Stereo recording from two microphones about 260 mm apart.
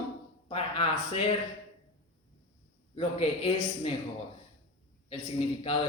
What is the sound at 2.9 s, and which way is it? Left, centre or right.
A man's voice, left.